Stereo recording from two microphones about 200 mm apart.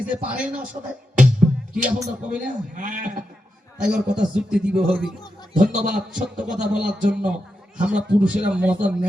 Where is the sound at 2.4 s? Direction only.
40° right (ahead or behind).